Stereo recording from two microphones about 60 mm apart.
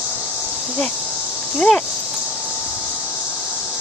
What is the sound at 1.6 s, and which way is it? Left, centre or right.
Speech, centre.